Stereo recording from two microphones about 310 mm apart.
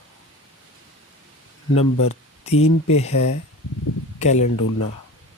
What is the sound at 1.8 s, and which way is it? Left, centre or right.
Speech, left.